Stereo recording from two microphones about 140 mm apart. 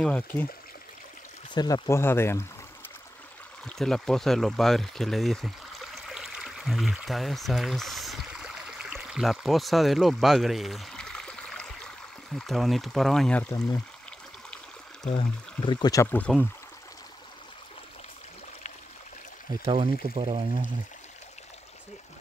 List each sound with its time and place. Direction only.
0.0 s speech: 10° left (ahead or behind)
1.5 s speech: 30° left (ahead or behind)
3.6 s speech: 5° left (ahead or behind)
15.0 s speech: 40° left (ahead or behind)
16.3 s speech: centre (ahead or behind)
19.6 s speech: 45° right (ahead or behind)